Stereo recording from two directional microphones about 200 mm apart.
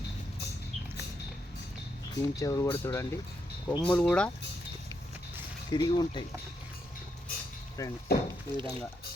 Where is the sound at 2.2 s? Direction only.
15° left (ahead or behind).